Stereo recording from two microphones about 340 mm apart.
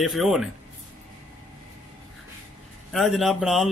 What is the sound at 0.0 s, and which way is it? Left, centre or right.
Speech, centre.